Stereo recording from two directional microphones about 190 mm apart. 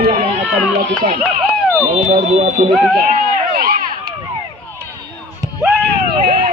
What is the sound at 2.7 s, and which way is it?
Speech, centre (ahead or behind).